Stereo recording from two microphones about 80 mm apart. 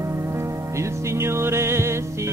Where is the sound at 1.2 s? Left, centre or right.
Right.